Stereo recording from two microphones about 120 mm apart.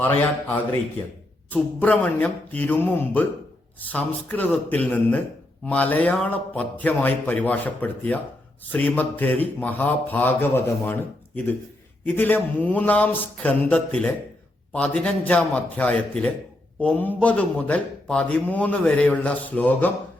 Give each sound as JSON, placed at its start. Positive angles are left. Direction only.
{"t": 0.0, "sound": "a man's voice", "side_deg": 15}
{"t": 1.8, "sound": "a man's voice", "side_deg": 15}